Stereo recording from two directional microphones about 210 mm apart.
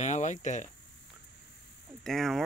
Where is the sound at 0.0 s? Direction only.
35° left (ahead or behind).